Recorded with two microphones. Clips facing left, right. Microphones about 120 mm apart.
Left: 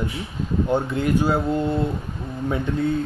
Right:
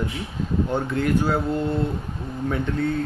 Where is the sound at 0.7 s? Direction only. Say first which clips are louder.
Left 2 dB; 15° left (ahead or behind).